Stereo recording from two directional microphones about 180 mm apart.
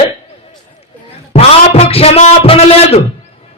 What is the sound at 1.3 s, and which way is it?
A man's voice, 35° left (ahead or behind).